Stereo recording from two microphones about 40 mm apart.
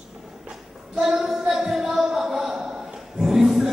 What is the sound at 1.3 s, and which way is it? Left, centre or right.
Music, centre.